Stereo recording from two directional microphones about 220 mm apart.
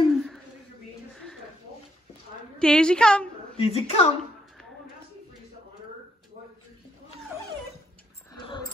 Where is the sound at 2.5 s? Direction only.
5° left (ahead or behind).